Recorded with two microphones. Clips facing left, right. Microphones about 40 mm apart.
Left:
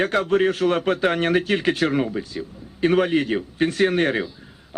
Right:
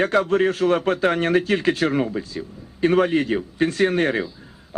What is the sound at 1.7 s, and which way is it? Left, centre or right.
A man's voice, centre.